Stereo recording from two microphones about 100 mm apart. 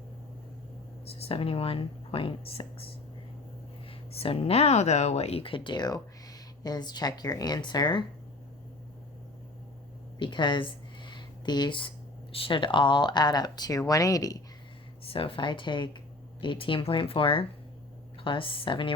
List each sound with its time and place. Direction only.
1.2 s speech: 70° left (ahead or behind); by 8.0 s 45° left (ahead or behind)
10.2 s a sound: 50° left (ahead or behind)
12.3 s speech: 65° left (ahead or behind); by 14.4 s 35° left (ahead or behind)
15.0 s speech: 70° left (ahead or behind)